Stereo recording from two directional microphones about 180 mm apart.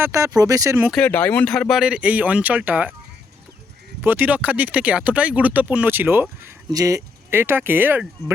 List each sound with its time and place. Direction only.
0.0 s speech: 15° right (ahead or behind)
0.9 s speech: 5° left (ahead or behind)
4.0 s speech: 10° right (ahead or behind)